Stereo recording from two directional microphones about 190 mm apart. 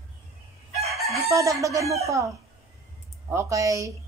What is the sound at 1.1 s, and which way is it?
Speech, 15° right (ahead or behind).